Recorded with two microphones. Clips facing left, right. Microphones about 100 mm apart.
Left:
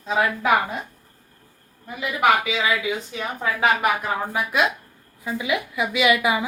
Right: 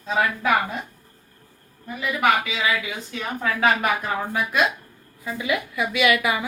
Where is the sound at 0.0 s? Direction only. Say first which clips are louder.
Left 1 dB; 15° left (ahead or behind).